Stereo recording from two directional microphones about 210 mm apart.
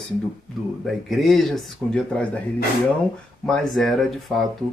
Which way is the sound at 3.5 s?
Centre (ahead or behind).